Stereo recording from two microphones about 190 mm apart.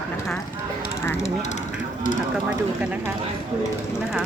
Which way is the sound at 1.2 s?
35° left (ahead or behind).